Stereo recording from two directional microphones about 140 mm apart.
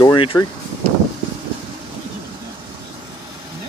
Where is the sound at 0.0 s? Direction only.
35° left (ahead or behind).